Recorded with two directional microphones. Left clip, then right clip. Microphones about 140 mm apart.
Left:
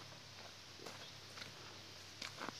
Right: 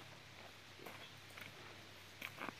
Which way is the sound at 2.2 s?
Centre (ahead or behind).